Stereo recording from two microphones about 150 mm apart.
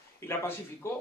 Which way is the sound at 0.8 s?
20° left (ahead or behind).